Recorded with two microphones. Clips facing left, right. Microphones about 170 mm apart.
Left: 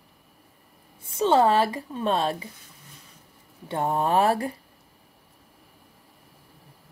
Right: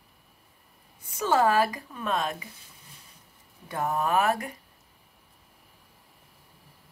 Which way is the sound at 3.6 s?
30° left (ahead or behind).